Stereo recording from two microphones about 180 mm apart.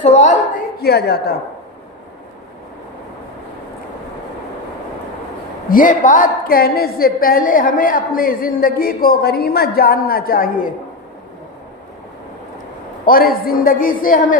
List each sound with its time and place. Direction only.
0.0 s a woman's voice: 40° left (ahead or behind)
0.8 s a woman's voice: 65° left (ahead or behind)
5.6 s a woman's voice: 50° left (ahead or behind)
13.1 s a woman's voice: 55° left (ahead or behind)